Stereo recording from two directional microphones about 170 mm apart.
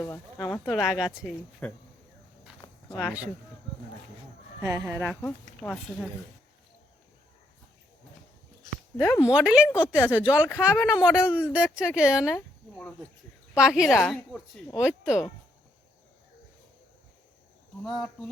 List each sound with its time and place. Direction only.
0.0 s speech: 20° left (ahead or behind)
0.7 s a woman's voice: centre (ahead or behind)
4.6 s speech: 20° right (ahead or behind)
5.5 s speech: 5° left (ahead or behind)
9.0 s speech: 15° left (ahead or behind)
9.2 s a woman's voice: 5° right (ahead or behind)
12.3 s a woman's voice: 5° left (ahead or behind)
17.8 s a woman's voice: centre (ahead or behind)